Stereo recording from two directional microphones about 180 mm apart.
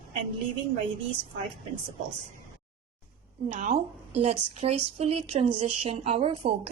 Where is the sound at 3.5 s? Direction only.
40° right (ahead or behind).